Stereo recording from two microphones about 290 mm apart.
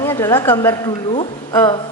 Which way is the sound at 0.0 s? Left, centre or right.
Centre.